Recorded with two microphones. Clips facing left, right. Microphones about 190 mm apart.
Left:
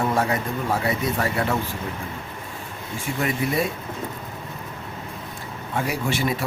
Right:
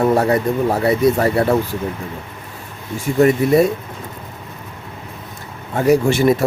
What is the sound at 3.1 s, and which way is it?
Speech, 40° right (ahead or behind).